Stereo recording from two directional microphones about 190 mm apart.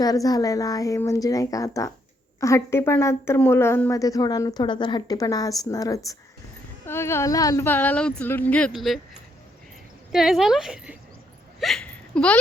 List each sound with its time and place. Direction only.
0.0 s a woman's voice: 20° left (ahead or behind); by 9.0 s centre (ahead or behind)
10.1 s a woman's voice: centre (ahead or behind)
11.6 s hiccup: 5° left (ahead or behind)